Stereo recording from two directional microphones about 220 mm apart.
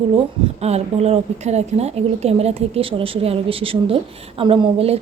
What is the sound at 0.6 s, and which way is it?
A woman's voice, 30° right (ahead or behind).